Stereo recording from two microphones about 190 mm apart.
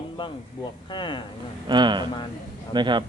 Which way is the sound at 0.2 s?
25° left (ahead or behind).